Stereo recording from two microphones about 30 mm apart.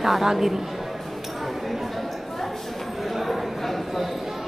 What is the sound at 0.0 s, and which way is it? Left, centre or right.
Speech, centre.